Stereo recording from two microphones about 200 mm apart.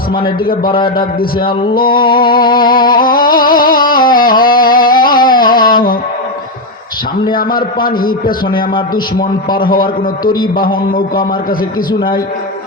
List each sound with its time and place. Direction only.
0.1 s a man's voice: 25° left (ahead or behind)
0.9 s a man's voice: 45° left (ahead or behind)
1.9 s a man's voice: 25° left (ahead or behind)
2.1 s a man's voice: 45° left (ahead or behind)
2.6 s music: 45° left (ahead or behind)
7.9 s a man's voice: 45° left (ahead or behind)
11.9 s a man's voice: 25° left (ahead or behind)